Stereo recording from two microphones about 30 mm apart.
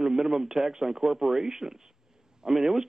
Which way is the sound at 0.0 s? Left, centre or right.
Centre.